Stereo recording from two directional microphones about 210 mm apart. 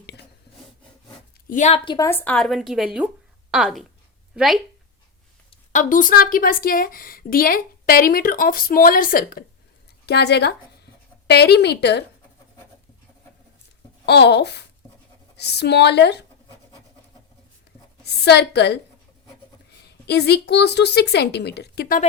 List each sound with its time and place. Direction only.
1.5 s a woman's voice: 35° left (ahead or behind)
2.0 s a woman's voice: 10° left (ahead or behind)
5.5 s speech: 35° left (ahead or behind); by 12.0 s 55° left (ahead or behind)
14.0 s speech: 55° left (ahead or behind)
18.0 s speech: 50° left (ahead or behind)
19.8 s speech: 50° left (ahead or behind)